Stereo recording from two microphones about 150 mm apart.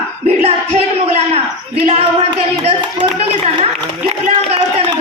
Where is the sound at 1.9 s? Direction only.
40° right (ahead or behind).